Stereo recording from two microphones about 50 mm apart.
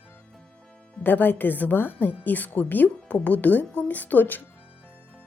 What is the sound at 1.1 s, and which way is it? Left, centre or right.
Speech, left.